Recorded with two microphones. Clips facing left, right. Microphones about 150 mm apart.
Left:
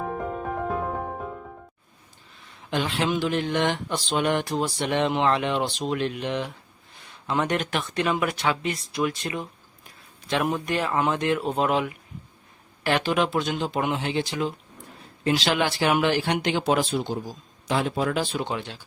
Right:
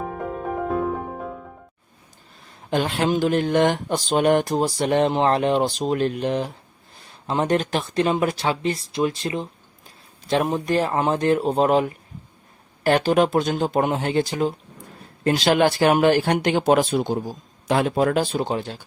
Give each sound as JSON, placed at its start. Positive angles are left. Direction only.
{"t": 0.0, "sound": "music", "side_deg": 0}
{"t": 2.4, "sound": "speech", "side_deg": -40}